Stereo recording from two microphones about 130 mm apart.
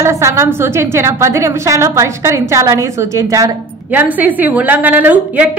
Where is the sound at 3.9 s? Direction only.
15° right (ahead or behind).